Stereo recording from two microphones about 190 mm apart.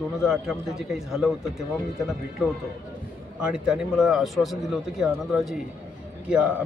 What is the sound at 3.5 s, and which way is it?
Speech, centre (ahead or behind).